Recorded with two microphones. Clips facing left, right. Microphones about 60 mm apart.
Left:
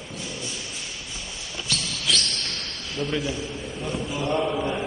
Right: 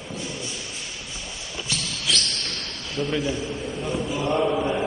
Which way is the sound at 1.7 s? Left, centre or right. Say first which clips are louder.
Left 1 dB; centre.